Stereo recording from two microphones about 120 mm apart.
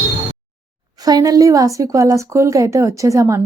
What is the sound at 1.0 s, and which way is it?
Speech, 30° right (ahead or behind).